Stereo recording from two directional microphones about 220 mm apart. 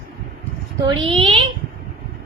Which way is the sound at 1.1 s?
25° right (ahead or behind).